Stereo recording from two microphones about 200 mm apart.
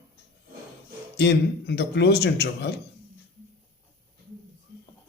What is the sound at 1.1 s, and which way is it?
A man's voice, 55° left (ahead or behind).